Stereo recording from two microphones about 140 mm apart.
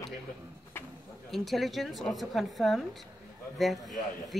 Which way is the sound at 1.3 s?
Centre (ahead or behind).